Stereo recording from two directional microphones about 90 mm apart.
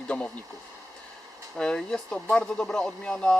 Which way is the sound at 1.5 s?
5° left (ahead or behind).